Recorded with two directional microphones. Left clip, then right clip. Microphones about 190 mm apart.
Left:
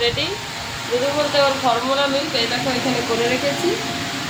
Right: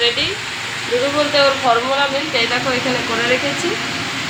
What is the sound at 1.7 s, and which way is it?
Speech, 35° right (ahead or behind).